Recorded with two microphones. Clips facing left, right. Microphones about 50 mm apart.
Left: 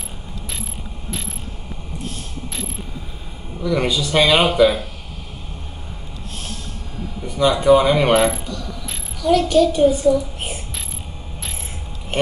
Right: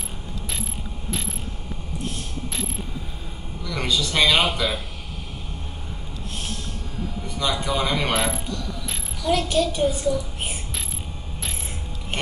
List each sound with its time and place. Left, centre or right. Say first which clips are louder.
1.1 s pulleys: even; centre
2.5 s mechanisms: even; centre
3.6 s speech: left 6 dB; centre
7.0 s a sound: left 2 dB; centre
7.3 s speech: left 11 dB; centre
8.1 s pulleys: left 8 dB; centre
9.4 s a child's voice: left 9 dB; centre